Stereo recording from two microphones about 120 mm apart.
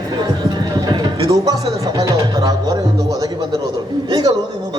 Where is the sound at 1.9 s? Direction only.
30° right (ahead or behind).